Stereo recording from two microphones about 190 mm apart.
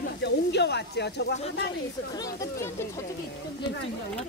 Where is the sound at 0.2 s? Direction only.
65° left (ahead or behind).